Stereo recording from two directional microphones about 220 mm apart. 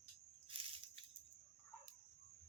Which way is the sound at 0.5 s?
25° right (ahead or behind).